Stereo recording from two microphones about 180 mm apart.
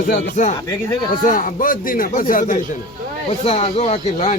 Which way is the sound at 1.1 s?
45° left (ahead or behind).